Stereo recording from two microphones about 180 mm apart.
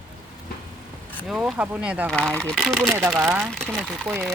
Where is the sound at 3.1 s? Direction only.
15° right (ahead or behind).